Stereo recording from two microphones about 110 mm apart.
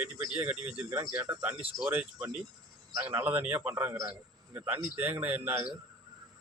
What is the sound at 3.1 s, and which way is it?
A man's voice, 15° right (ahead or behind).